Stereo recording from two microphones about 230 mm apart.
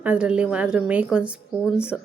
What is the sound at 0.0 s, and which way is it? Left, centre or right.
A woman's voice, centre.